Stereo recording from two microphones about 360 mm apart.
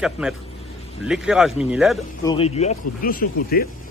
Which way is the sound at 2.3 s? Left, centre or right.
Centre.